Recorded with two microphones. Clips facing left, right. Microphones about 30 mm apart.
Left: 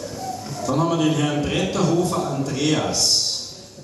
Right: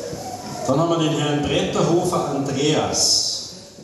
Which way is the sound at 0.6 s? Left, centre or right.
Centre.